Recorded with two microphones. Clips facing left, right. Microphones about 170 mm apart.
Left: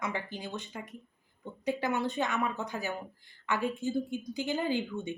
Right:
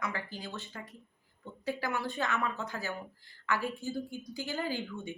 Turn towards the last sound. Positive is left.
turn(degrees=20)  # may be behind; listen again after turning